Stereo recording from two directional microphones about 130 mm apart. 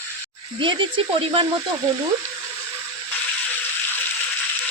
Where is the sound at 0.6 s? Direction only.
40° right (ahead or behind).